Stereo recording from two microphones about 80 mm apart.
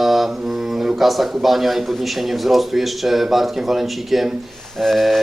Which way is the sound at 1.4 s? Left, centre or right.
Centre.